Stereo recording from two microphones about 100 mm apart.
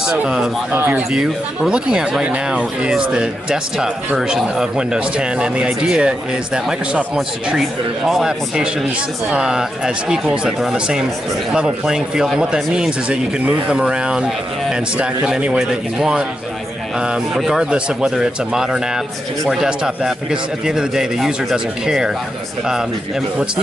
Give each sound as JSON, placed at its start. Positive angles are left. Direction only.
{"t": 0.0, "sound": "speech", "side_deg": -10}
{"t": 0.7, "sound": "speech", "side_deg": -20}
{"t": 1.1, "sound": "a man's voice", "side_deg": -5}